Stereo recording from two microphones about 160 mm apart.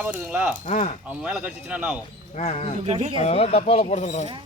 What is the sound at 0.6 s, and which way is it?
Speech, 45° left (ahead or behind).